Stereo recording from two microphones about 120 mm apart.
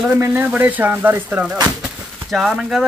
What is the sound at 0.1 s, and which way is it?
Speech, 15° right (ahead or behind).